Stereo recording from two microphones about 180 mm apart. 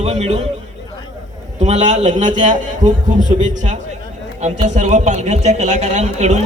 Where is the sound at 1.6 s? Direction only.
40° right (ahead or behind).